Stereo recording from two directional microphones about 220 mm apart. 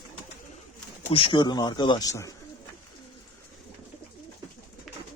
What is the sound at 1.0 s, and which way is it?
Speech, 25° left (ahead or behind).